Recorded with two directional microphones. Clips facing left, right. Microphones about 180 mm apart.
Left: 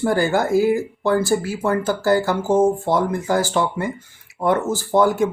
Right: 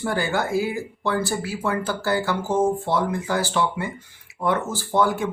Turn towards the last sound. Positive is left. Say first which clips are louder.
# left 5 dB
turn(degrees=45)  # may be behind; listen again after turning